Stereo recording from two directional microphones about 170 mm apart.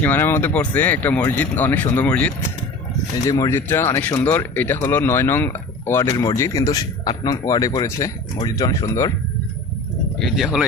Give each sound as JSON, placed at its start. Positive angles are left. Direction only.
{"t": 0.0, "sound": "speech", "side_deg": 10}
{"t": 10.2, "sound": "speech", "side_deg": 0}